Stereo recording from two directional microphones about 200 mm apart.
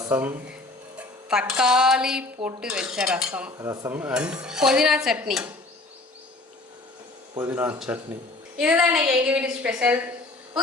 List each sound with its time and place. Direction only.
0.0 s a woman's voice: 10° right (ahead or behind)
2.6 s dishes: 5° right (ahead or behind)
7.3 s a woman's voice: 10° right (ahead or behind)